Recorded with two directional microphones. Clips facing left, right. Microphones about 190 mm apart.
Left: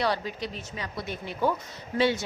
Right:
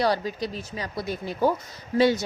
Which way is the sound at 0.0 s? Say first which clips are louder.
Right 4 dB; 40° right (ahead or behind).